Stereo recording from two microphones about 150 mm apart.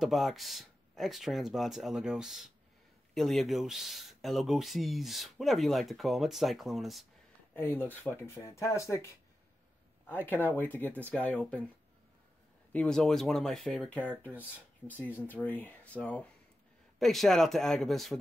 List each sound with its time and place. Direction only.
0.0 s speech: centre (ahead or behind)
7.5 s speech: 15° left (ahead or behind)
10.0 s speech: 15° left (ahead or behind)
12.7 s speech: 5° left (ahead or behind)